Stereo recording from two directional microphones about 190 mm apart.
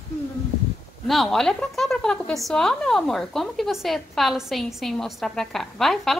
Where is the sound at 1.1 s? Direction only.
Centre (ahead or behind).